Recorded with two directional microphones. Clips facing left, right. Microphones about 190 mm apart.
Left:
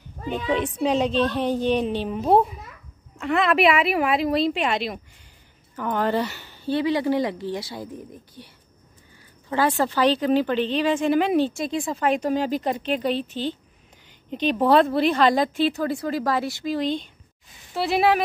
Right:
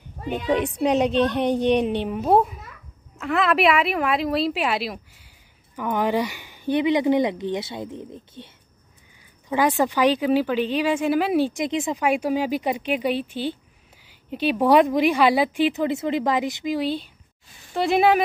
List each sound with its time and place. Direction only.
0.5 s speech: 15° right (ahead or behind)
2.0 s a woman's voice: 5° right (ahead or behind); by 8.5 s 25° right (ahead or behind)
9.8 s a woman's voice: 15° right (ahead or behind)